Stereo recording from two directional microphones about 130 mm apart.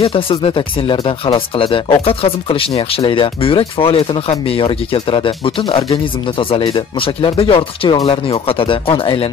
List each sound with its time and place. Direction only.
0.0 s speech: 45° left (ahead or behind)